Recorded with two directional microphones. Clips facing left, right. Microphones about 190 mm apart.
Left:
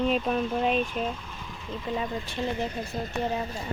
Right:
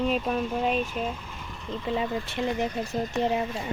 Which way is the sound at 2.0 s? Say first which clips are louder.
Right 3 dB; 25° right (ahead or behind).